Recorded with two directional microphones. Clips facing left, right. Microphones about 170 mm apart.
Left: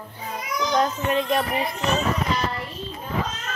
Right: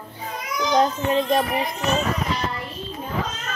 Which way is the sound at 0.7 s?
30° right (ahead or behind).